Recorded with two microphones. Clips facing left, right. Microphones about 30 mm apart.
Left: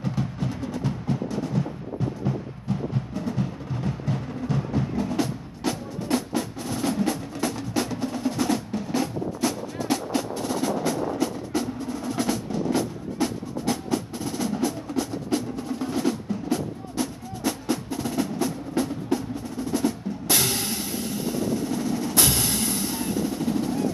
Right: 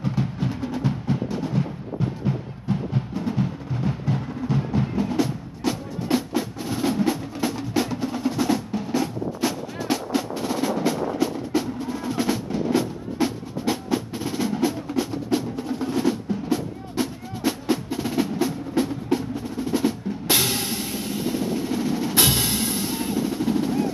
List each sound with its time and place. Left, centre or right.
0.0 s music: centre